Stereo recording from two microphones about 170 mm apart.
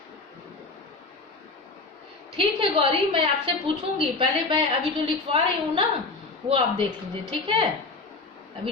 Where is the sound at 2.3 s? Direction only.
30° right (ahead or behind).